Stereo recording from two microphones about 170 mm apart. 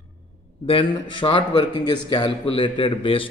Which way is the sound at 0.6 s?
30° left (ahead or behind).